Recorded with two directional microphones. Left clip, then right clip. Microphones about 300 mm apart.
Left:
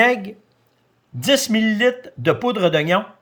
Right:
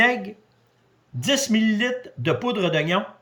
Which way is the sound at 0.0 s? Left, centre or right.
Left.